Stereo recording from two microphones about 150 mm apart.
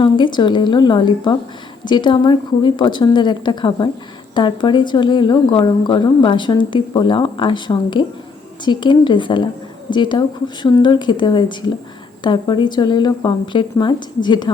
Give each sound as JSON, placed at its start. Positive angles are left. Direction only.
{"t": 0.0, "sound": "a woman's voice", "side_deg": 30}